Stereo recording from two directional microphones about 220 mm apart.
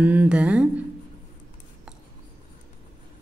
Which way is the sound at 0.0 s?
5° right (ahead or behind).